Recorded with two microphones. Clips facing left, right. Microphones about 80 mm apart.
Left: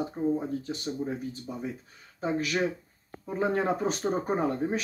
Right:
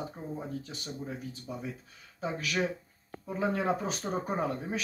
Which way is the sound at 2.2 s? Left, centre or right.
Left.